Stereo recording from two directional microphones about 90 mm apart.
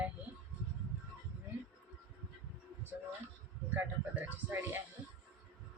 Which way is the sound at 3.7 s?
20° right (ahead or behind).